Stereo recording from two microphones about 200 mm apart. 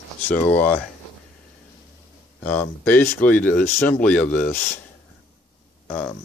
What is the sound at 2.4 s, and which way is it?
Speech, 10° left (ahead or behind).